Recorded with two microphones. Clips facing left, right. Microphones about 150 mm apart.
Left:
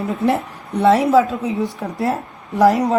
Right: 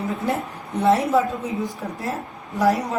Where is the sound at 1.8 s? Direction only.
65° left (ahead or behind).